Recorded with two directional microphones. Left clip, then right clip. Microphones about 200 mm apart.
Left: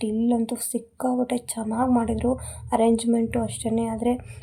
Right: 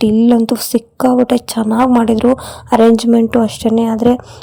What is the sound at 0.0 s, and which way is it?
A woman's voice, 45° right (ahead or behind).